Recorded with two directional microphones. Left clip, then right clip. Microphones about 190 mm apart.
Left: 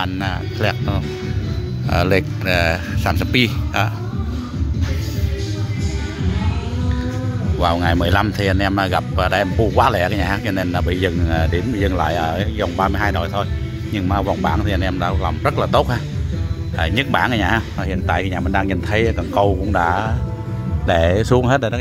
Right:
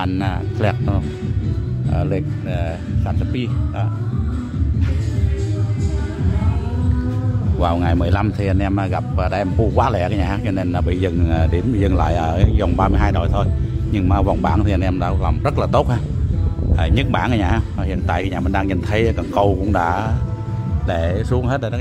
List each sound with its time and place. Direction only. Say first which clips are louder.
0.1 s speech: even; 15° right (ahead or behind)
1.9 s speech: left 7 dB; 10° left (ahead or behind)
7.6 s speech: left 2 dB; 5° right (ahead or behind)
20.8 s speech: left 6 dB; 10° left (ahead or behind)
21.2 s speech: left 6 dB; 25° left (ahead or behind)
21.5 s speech: left 5 dB; 10° left (ahead or behind)